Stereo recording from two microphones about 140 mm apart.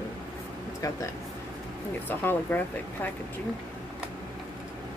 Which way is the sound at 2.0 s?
15° left (ahead or behind).